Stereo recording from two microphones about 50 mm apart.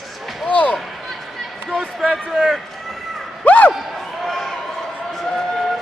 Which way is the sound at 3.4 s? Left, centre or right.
Left.